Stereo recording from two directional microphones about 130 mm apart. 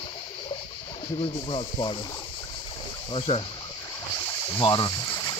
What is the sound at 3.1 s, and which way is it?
Speech, 45° left (ahead or behind).